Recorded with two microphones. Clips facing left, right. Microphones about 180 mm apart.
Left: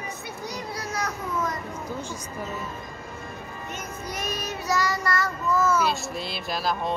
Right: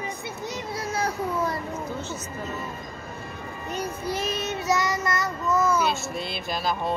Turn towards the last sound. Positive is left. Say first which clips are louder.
# even
turn(degrees=0)  # may be behind; listen again after turning